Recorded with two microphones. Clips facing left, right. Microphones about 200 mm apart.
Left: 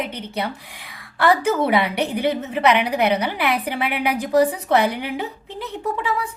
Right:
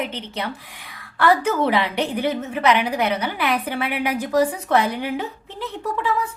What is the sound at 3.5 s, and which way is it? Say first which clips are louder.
Speech: even; 15° left (ahead or behind).